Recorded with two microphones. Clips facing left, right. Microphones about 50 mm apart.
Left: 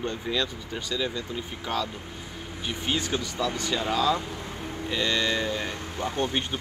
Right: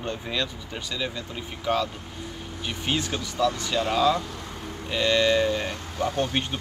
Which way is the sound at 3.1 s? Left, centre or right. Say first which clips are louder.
Right 3 dB; centre.